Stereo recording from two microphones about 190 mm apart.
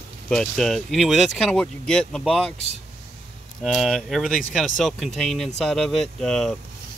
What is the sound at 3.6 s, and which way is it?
Speech, centre (ahead or behind).